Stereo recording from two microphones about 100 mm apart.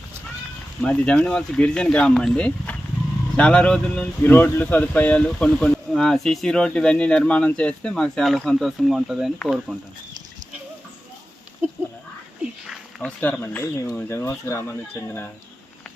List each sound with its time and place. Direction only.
0.8 s speech: 10° left (ahead or behind)
12.6 s a sound: 5° right (ahead or behind)
13.1 s speech: 15° left (ahead or behind)